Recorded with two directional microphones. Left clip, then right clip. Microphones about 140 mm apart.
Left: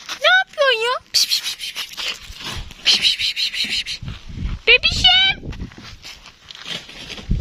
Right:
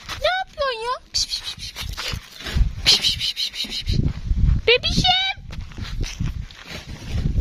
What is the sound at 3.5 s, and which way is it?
Speech, 15° right (ahead or behind).